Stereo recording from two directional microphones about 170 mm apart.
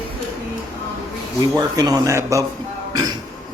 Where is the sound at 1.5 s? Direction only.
20° right (ahead or behind).